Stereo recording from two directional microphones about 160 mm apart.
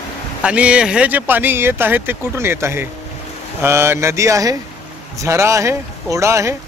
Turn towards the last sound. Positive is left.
turn(degrees=-20)  # may be behind; listen again after turning